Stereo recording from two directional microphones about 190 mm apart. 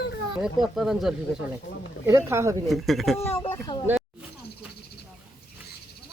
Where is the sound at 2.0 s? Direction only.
15° right (ahead or behind).